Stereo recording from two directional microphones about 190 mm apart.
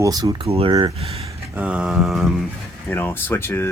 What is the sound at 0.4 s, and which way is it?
Speech, 30° right (ahead or behind).